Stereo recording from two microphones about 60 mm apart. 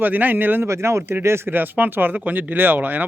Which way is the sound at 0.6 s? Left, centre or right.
Right.